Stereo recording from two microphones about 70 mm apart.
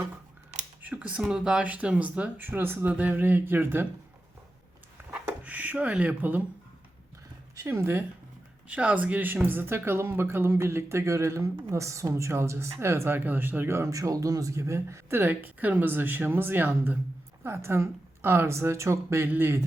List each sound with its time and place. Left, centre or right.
0.8 s speech: centre
5.1 s a sound: right
7.7 s speech: right
8.6 s speech: centre; by 15.2 s right
15.2 s speech: right